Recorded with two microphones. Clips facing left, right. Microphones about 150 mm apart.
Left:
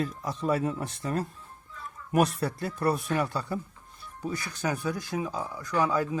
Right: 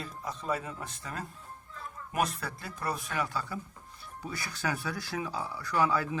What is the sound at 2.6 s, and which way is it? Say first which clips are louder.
Speech: left 8 dB; 25° left (ahead or behind).